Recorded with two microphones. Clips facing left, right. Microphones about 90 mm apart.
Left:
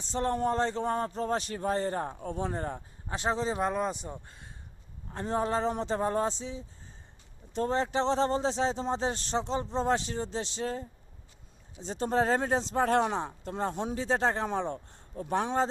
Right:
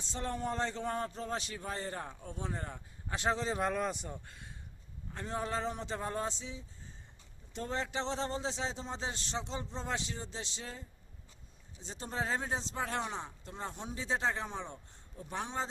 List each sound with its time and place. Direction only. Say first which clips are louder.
0.0 s a man's voice: left 8 dB; 40° left (ahead or behind)
3.1 s a man's voice: left 3 dB; 30° left (ahead or behind); by 10.8 s 45° left (ahead or behind)
11.9 s speech: left 10 dB; 55° left (ahead or behind)
14.0 s speech: left 5 dB; 50° left (ahead or behind)